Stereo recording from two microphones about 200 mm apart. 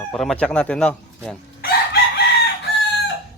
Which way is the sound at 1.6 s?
50° left (ahead or behind).